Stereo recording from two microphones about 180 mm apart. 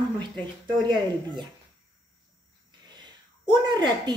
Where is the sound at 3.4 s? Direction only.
25° right (ahead or behind).